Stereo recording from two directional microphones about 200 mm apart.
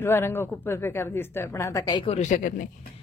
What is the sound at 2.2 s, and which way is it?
Speech, 40° left (ahead or behind).